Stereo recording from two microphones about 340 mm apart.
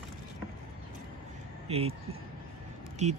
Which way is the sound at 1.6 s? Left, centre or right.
Centre.